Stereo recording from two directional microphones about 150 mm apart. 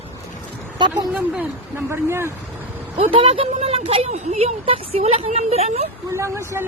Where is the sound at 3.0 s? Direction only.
35° right (ahead or behind).